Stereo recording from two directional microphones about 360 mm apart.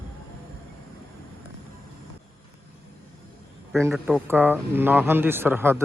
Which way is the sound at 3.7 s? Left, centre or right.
Centre.